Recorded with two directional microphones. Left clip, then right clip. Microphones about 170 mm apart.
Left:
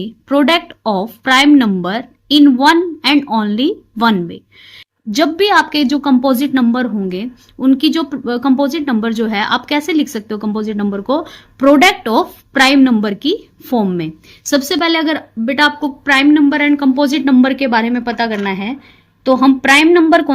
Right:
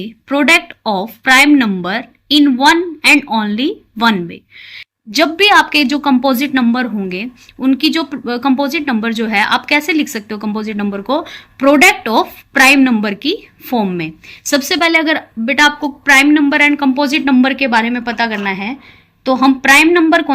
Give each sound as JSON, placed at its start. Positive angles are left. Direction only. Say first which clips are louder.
{"t": 0.0, "sound": "a woman's voice", "louder": "left 1 dB", "side_deg": 40}